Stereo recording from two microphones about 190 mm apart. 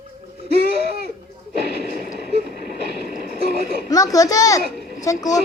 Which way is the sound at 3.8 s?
20° left (ahead or behind).